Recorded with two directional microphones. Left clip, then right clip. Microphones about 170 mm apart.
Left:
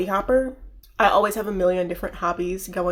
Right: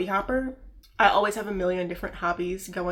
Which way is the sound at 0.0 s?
40° left (ahead or behind).